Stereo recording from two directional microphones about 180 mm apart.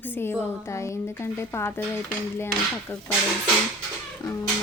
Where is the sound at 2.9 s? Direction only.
10° left (ahead or behind).